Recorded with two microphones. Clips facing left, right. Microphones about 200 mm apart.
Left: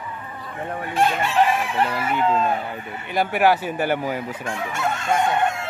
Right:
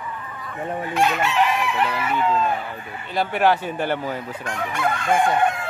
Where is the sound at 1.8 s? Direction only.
50° left (ahead or behind).